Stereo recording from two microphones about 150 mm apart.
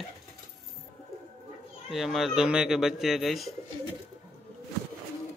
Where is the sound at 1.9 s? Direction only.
Centre (ahead or behind).